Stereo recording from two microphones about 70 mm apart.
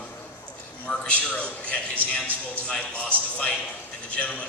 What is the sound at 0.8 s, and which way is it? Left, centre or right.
A man's voice, centre.